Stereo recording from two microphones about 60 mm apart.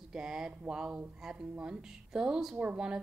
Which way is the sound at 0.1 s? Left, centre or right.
Centre.